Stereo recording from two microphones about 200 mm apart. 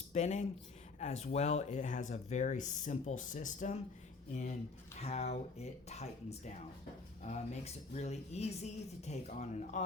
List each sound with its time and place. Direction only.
0.1 s speech: 35° left (ahead or behind)